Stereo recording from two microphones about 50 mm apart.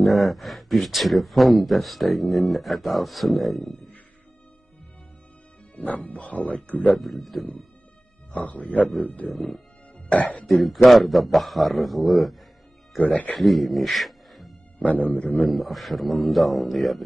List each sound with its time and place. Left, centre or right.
0.0 s speech: centre
5.8 s speech: left
7.0 s speech: centre
8.3 s speech: left
9.3 s speech: centre
10.1 s speech: left
10.4 s speech: centre
13.0 s speech: left
13.4 s speech: centre
14.8 s speech: left
15.4 s speech: centre